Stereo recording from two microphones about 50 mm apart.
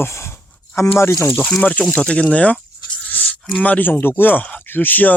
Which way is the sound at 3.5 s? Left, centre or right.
Left.